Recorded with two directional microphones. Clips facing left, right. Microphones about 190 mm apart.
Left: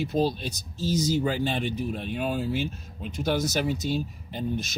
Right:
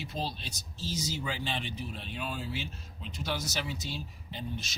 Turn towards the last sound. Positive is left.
turn(degrees=50)  # may be behind; listen again after turning